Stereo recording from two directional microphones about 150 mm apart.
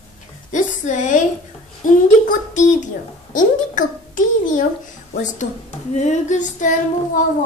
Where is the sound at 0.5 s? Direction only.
55° left (ahead or behind).